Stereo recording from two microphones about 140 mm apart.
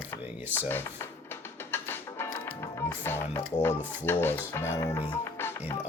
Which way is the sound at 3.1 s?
15° left (ahead or behind).